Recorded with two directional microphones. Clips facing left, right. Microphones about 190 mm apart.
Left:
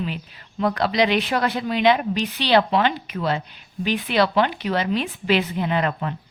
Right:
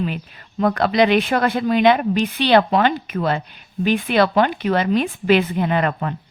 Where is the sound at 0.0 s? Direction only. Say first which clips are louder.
Right 4 dB; 50° right (ahead or behind).